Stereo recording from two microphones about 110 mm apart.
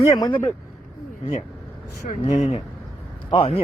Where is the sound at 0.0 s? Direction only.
35° left (ahead or behind).